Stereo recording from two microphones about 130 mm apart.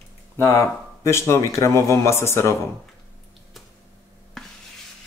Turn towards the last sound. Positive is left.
turn(degrees=0)  # may be behind; listen again after turning